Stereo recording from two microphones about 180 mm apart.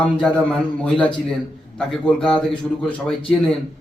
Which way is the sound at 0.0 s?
5° left (ahead or behind).